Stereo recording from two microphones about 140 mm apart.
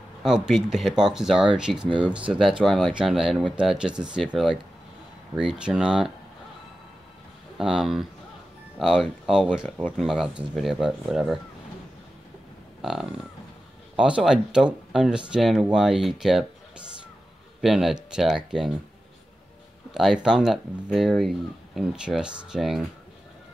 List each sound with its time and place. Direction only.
0.2 s speech: 5° right (ahead or behind)
5.3 s speech: 5° right (ahead or behind)
7.5 s speech: 5° right (ahead or behind)
13.9 s speech: 5° right (ahead or behind)
17.6 s speech: centre (ahead or behind)
19.9 s speech: 5° right (ahead or behind)